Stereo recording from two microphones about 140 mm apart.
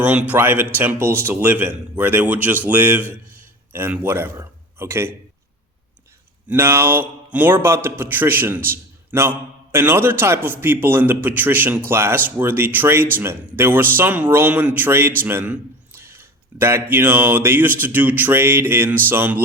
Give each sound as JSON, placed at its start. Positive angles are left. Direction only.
{"t": 0.3, "sound": "a man's voice", "side_deg": -15}
{"t": 6.5, "sound": "a man's voice", "side_deg": -15}